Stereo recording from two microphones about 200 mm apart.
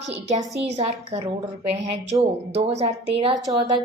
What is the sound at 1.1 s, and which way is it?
A woman's voice, 30° right (ahead or behind).